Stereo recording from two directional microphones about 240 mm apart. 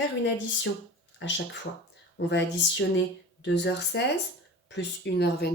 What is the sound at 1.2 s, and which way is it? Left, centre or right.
Speech, left.